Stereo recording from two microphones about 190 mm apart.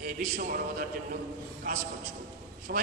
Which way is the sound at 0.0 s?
45° right (ahead or behind).